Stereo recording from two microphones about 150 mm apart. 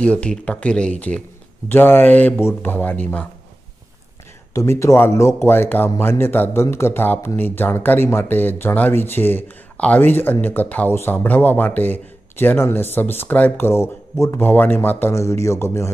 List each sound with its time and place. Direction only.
0.0 s speech: 10° left (ahead or behind)
4.6 s speech: 20° left (ahead or behind)